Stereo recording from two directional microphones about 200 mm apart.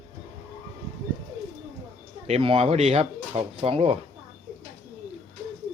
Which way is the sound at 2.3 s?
30° right (ahead or behind).